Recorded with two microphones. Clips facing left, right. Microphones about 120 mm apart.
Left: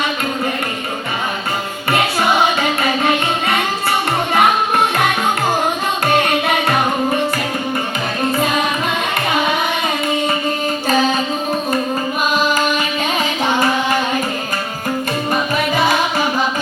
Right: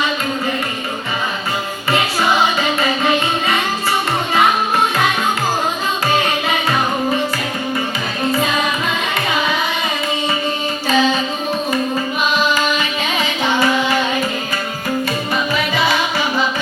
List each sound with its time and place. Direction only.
6.1 s music: 60° left (ahead or behind)
10.8 s music: 45° left (ahead or behind)
13.1 s music: 45° left (ahead or behind)
15.3 s music: 45° left (ahead or behind)